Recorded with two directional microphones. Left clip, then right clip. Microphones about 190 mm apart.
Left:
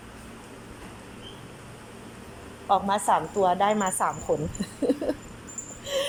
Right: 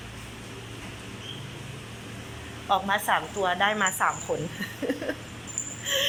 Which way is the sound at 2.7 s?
20° left (ahead or behind).